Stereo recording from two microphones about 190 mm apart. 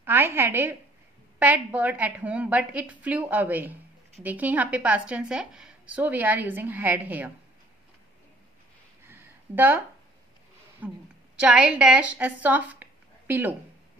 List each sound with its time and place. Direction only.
0.0 s a woman's voice: 10° right (ahead or behind)
9.0 s a sound: 10° right (ahead or behind)
10.8 s a woman's voice: 5° right (ahead or behind)